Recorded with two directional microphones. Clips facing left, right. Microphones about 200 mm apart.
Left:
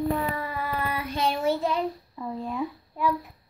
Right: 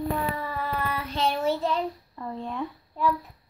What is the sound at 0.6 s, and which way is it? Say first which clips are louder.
Child singing: even; 10° left (ahead or behind).